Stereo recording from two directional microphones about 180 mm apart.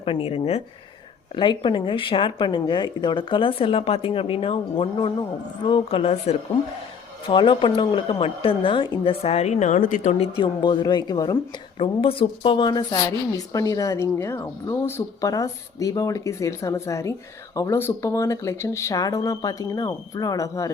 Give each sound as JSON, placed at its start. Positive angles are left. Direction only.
{"t": 0.0, "sound": "a woman's voice", "side_deg": 30}